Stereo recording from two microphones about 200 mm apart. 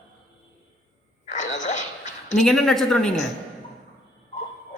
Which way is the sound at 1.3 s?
35° left (ahead or behind).